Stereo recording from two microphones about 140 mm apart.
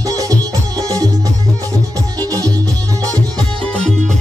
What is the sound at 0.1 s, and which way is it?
Music, 25° right (ahead or behind).